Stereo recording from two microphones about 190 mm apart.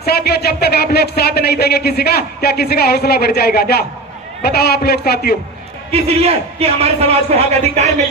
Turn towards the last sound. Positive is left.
turn(degrees=-35)  # may be behind; listen again after turning